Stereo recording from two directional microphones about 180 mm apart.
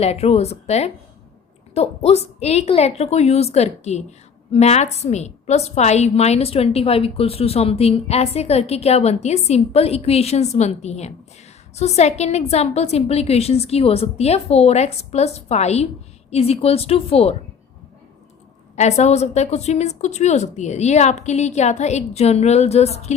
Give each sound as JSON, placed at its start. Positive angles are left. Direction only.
{"t": 0.0, "sound": "a woman's voice", "side_deg": 35}
{"t": 18.8, "sound": "a woman's voice", "side_deg": 40}